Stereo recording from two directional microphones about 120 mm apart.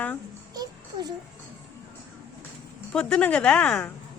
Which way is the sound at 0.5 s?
35° right (ahead or behind).